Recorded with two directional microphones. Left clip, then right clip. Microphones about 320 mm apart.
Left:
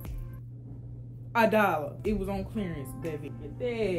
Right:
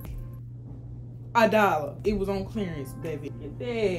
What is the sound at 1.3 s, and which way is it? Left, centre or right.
Speech, centre.